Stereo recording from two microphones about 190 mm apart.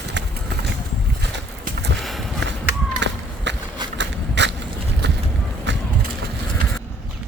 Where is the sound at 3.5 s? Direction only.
65° right (ahead or behind).